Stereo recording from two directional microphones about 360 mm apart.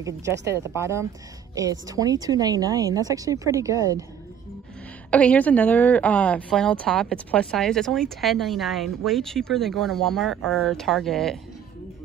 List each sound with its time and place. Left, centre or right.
0.0 s a woman's voice: centre
5.1 s a woman's voice: centre